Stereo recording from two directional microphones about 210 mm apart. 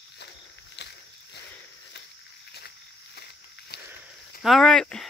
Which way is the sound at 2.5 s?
50° left (ahead or behind).